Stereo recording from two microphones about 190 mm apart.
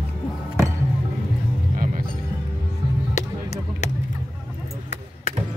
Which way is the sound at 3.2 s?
35° left (ahead or behind).